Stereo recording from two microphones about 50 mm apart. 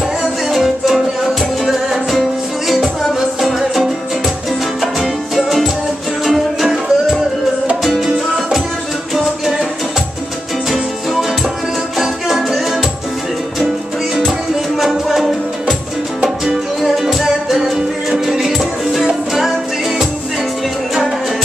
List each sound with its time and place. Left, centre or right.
0.5 s music: centre
5.0 s music: centre
12.0 s music: centre
14.8 s music: centre
16.8 s music: centre